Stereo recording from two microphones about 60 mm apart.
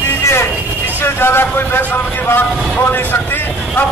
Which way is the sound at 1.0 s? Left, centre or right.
Left.